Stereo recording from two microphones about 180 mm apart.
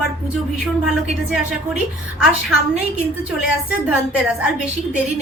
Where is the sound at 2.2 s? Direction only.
5° right (ahead or behind).